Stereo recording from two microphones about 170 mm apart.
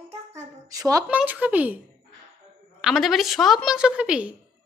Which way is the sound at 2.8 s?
Centre (ahead or behind).